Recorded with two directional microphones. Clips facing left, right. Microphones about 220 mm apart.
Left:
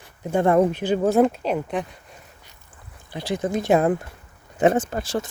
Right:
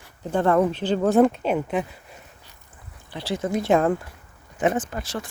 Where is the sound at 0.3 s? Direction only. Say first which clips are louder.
Left 2 dB; 15° left (ahead or behind); by 1.9 s 5° right (ahead or behind).